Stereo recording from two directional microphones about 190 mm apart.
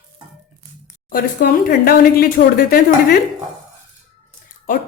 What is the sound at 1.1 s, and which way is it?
Speech, 50° left (ahead or behind).